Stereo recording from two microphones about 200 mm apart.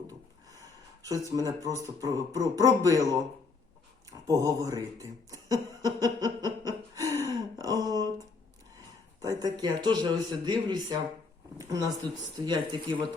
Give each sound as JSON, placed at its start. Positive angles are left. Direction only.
{"t": 1.0, "sound": "speech", "side_deg": -15}
{"t": 4.3, "sound": "speech", "side_deg": -15}
{"t": 6.9, "sound": "gasp", "side_deg": -15}
{"t": 7.2, "sound": "gasp", "side_deg": 15}
{"t": 7.6, "sound": "a sound", "side_deg": -20}
{"t": 9.2, "sound": "speech", "side_deg": -20}